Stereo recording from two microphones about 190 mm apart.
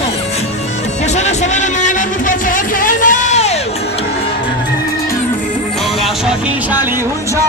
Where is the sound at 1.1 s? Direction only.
40° left (ahead or behind).